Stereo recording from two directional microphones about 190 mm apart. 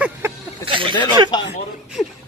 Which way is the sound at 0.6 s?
25° right (ahead or behind).